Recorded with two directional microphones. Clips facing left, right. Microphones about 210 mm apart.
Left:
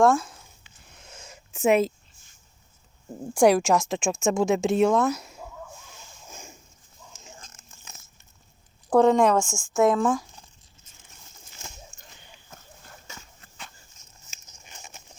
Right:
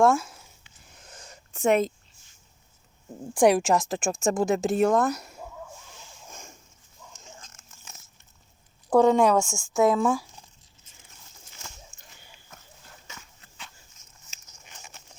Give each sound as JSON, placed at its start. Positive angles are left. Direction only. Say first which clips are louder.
{"t": 0.0, "sound": "speech", "louder": "left 1 dB", "side_deg": -5}
{"t": 0.9, "sound": "a sound", "louder": "left 1 dB", "side_deg": 0}
{"t": 3.3, "sound": "speech", "louder": "left 1 dB", "side_deg": 0}
{"t": 6.3, "sound": "a sound", "louder": "left 3 dB", "side_deg": 5}
{"t": 8.9, "sound": "speech", "louder": "even", "side_deg": 0}
{"t": 13.4, "sound": "dog", "louder": "left 2 dB", "side_deg": 50}